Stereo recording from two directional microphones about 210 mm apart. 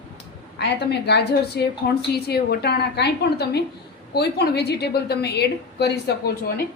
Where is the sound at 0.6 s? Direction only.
55° left (ahead or behind).